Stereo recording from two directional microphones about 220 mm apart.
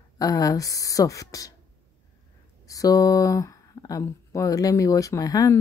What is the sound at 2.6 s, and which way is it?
Speech, 15° left (ahead or behind).